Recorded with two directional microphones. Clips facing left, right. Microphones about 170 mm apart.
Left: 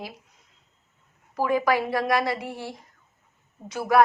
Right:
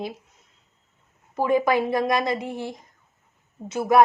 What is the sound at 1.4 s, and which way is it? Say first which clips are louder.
A woman's voice: right 2 dB; 20° right (ahead or behind).